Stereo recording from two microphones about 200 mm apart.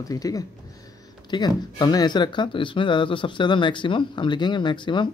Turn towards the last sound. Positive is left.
turn(degrees=25)  # may be behind; listen again after turning